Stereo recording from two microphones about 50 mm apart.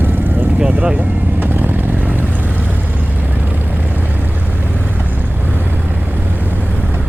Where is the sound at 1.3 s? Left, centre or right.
Right.